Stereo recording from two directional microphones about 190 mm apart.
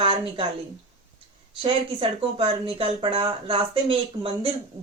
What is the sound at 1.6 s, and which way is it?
Speech, 30° right (ahead or behind).